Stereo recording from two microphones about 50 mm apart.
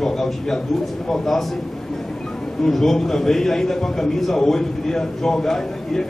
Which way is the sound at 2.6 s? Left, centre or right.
Centre.